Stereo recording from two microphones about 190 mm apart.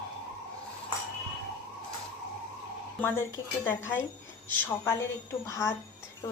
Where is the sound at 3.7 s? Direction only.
10° left (ahead or behind).